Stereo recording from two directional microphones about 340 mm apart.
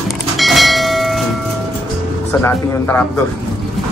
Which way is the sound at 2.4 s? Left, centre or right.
Centre.